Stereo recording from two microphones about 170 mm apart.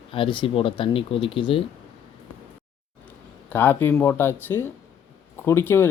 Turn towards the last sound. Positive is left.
turn(degrees=15)  # may be behind; listen again after turning